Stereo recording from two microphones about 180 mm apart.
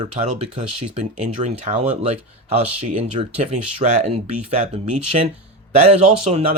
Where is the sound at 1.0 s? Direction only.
40° right (ahead or behind).